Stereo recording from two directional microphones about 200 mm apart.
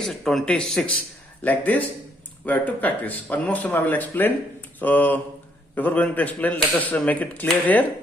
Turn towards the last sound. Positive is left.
turn(degrees=5)  # may be behind; listen again after turning